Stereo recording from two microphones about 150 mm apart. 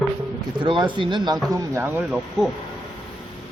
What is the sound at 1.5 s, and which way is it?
Speech, 15° right (ahead or behind).